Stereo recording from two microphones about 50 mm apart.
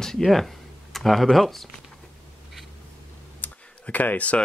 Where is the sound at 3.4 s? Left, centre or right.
Left.